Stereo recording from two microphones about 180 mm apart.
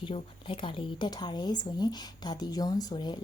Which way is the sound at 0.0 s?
30° left (ahead or behind).